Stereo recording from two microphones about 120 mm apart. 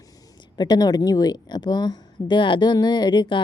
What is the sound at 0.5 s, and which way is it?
A woman's voice, 35° left (ahead or behind).